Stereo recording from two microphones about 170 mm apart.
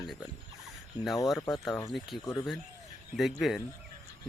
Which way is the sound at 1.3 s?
20° left (ahead or behind).